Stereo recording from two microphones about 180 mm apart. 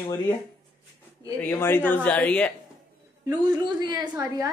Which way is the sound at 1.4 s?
10° left (ahead or behind).